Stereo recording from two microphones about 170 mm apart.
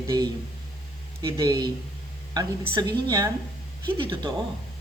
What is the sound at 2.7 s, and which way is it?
Speech, 25° right (ahead or behind).